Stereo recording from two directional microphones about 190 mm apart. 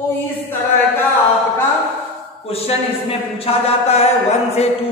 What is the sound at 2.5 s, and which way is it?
A man's voice, 30° left (ahead or behind).